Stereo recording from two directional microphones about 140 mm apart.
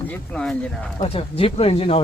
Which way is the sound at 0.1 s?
5° left (ahead or behind).